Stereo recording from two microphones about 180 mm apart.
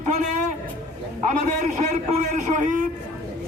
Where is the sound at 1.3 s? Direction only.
40° right (ahead or behind).